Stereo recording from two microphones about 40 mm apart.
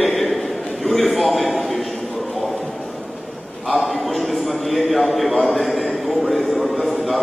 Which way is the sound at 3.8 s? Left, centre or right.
Centre.